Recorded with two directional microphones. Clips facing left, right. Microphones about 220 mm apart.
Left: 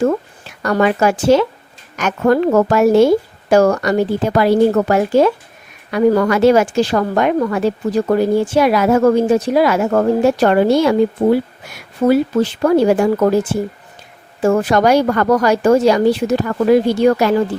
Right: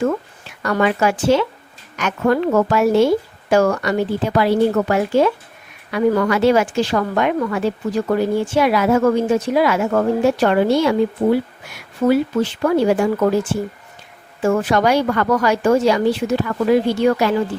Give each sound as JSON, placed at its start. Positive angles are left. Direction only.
{"t": 0.0, "sound": "a woman's voice", "side_deg": 40}
{"t": 12.0, "sound": "speech", "side_deg": 40}
{"t": 14.4, "sound": "speech", "side_deg": 40}